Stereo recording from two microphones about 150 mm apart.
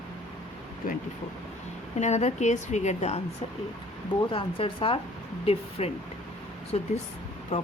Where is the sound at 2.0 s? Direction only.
50° left (ahead or behind).